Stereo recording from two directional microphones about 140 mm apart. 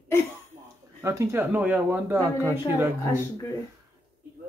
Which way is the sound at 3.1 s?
20° left (ahead or behind).